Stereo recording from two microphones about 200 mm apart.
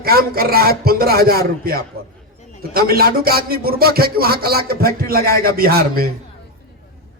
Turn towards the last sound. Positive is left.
turn(degrees=-50)  # may be behind; listen again after turning